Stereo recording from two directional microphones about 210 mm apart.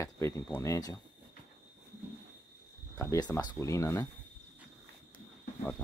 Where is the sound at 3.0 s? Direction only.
15° left (ahead or behind).